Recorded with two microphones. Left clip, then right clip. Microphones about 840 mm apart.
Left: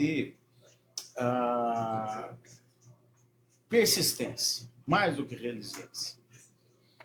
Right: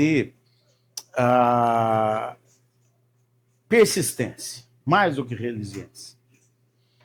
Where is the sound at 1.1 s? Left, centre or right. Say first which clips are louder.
Right 11 dB; right.